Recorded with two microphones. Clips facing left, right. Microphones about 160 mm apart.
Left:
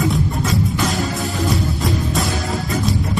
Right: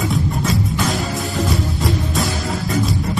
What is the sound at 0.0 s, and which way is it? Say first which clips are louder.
Music: left 1 dB; centre (ahead or behind).